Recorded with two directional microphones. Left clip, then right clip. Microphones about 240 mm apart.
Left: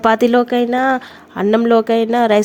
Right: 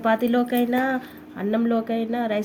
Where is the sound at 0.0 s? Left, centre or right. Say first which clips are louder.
Left 9 dB; left.